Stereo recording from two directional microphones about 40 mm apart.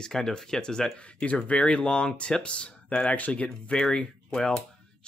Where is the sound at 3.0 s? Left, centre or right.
Left.